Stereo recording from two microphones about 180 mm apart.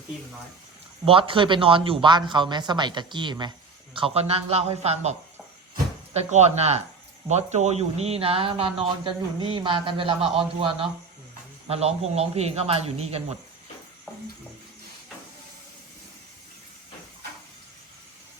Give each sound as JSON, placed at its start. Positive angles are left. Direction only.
{"t": 1.0, "sound": "speech", "side_deg": -30}
{"t": 6.1, "sound": "speech", "side_deg": -35}